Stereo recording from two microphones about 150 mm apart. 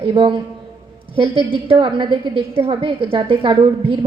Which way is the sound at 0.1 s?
35° right (ahead or behind).